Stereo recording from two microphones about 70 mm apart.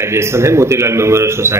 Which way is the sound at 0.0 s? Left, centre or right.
Right.